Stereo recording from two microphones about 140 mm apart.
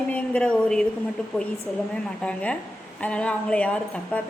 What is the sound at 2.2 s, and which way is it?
A woman's voice, 10° left (ahead or behind).